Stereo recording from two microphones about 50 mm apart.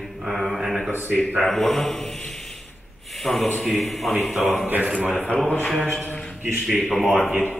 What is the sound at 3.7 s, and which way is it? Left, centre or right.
Mantra, centre.